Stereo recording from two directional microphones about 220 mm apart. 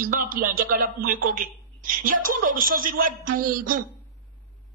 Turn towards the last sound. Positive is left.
turn(degrees=-40)  # may be behind; listen again after turning